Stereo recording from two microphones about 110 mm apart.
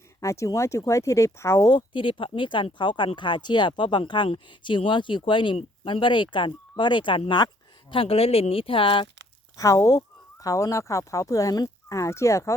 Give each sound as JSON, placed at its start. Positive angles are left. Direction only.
{"t": 0.2, "sound": "speech", "side_deg": 30}
{"t": 1.7, "sound": "speech", "side_deg": 50}
{"t": 7.3, "sound": "a sound", "side_deg": 45}
{"t": 7.9, "sound": "speech", "side_deg": 60}
{"t": 9.6, "sound": "speech", "side_deg": 30}